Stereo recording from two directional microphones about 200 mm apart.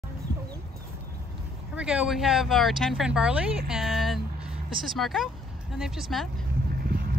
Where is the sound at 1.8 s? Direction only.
5° right (ahead or behind).